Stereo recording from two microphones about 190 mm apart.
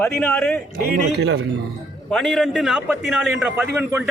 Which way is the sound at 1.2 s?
65° right (ahead or behind).